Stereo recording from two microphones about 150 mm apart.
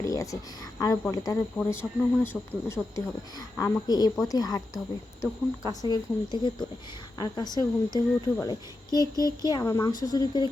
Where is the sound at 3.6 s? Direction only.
25° left (ahead or behind).